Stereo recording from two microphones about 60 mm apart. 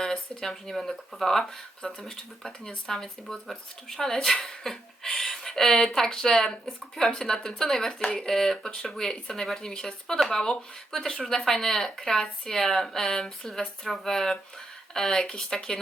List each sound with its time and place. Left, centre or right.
0.0 s speech: centre
8.0 s speech: centre